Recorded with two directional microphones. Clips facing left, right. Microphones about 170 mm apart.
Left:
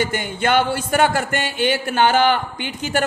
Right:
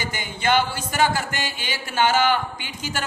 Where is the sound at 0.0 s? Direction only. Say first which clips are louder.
Left 5 dB; 55° left (ahead or behind).